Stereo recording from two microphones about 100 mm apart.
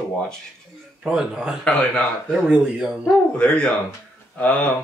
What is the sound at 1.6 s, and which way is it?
Speech, 10° left (ahead or behind).